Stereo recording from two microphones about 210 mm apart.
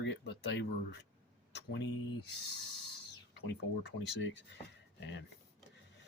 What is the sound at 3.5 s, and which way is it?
Speech, 60° left (ahead or behind).